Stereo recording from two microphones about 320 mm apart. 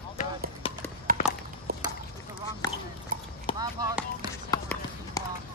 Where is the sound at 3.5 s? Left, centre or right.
Centre.